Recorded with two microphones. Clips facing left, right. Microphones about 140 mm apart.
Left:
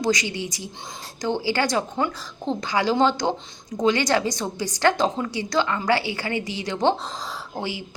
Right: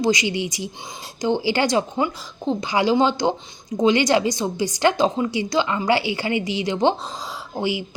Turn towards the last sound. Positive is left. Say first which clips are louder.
# right 5 dB
turn(degrees=-15)  # may be behind; listen again after turning